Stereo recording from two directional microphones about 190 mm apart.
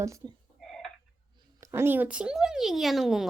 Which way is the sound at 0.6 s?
Centre (ahead or behind).